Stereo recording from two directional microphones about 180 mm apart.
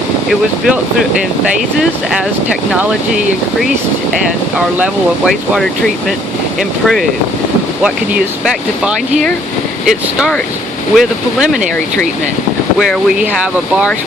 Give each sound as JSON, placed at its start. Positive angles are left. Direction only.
{"t": 0.3, "sound": "speech", "side_deg": 0}
{"t": 4.8, "sound": "speech", "side_deg": 0}
{"t": 12.9, "sound": "speech", "side_deg": -5}